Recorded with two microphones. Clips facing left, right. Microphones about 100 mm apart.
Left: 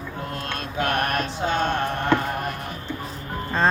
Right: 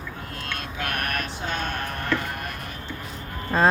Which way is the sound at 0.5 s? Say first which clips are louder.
Left 6 dB; 30° left (ahead or behind).